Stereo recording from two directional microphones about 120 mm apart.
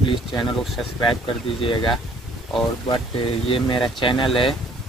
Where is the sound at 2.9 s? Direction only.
45° left (ahead or behind).